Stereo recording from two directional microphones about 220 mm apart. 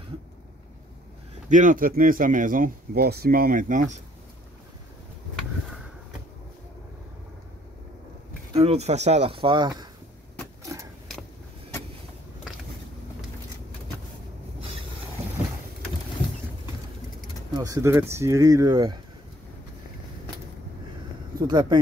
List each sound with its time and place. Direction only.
1.5 s speech: 35° right (ahead or behind)
8.5 s speech: 30° right (ahead or behind)
10.6 s vehicle: 15° right (ahead or behind)
17.6 s speech: 15° right (ahead or behind)
21.5 s speech: 20° right (ahead or behind)